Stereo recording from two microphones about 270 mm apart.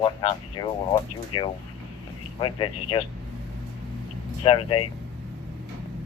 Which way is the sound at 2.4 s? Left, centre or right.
Centre.